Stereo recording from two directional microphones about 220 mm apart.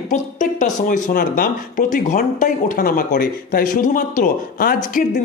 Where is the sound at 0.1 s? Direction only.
35° left (ahead or behind).